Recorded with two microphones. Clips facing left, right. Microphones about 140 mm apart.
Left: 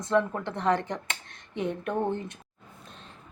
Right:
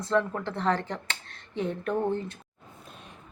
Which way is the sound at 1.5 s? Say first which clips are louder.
Even; 20° left (ahead or behind).